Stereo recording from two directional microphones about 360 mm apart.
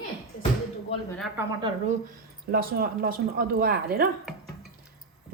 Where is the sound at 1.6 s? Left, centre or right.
Centre.